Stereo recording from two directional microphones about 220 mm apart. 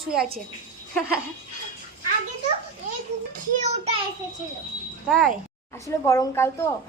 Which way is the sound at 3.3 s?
30° right (ahead or behind).